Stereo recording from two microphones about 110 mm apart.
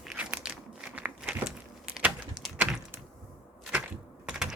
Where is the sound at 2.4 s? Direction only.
40° right (ahead or behind).